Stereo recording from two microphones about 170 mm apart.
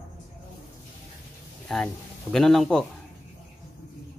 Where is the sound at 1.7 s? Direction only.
Centre (ahead or behind).